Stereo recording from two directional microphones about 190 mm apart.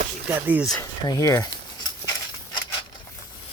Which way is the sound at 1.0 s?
15° left (ahead or behind).